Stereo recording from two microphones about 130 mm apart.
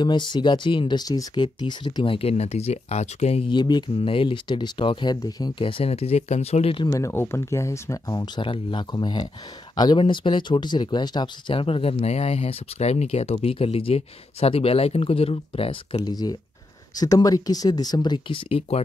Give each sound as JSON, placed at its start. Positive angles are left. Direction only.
{"t": 0.0, "sound": "speech", "side_deg": 35}
{"t": 3.4, "sound": "speech", "side_deg": 35}
{"t": 6.9, "sound": "speech", "side_deg": 20}
{"t": 8.4, "sound": "speech", "side_deg": 40}
{"t": 16.0, "sound": "speech", "side_deg": 30}